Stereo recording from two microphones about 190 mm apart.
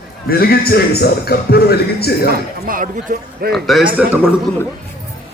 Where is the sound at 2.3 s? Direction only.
45° right (ahead or behind).